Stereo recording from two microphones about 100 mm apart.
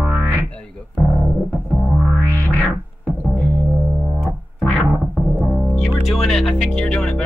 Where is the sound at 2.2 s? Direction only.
25° right (ahead or behind).